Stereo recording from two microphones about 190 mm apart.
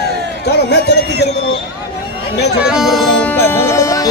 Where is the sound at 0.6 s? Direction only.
60° left (ahead or behind).